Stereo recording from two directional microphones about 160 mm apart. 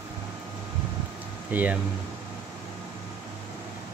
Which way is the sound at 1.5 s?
10° right (ahead or behind).